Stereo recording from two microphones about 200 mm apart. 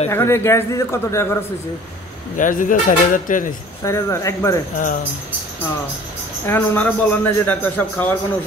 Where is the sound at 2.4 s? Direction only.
40° left (ahead or behind).